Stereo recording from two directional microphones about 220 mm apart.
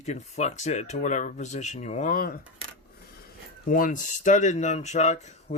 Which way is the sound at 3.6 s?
40° left (ahead or behind).